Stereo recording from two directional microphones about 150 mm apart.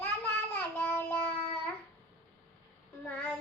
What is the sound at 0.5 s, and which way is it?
Child singing, 15° left (ahead or behind).